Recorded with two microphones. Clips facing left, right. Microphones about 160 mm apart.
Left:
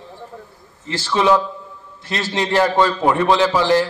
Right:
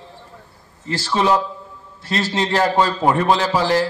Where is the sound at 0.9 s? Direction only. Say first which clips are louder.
Left 2 dB; 35° right (ahead or behind).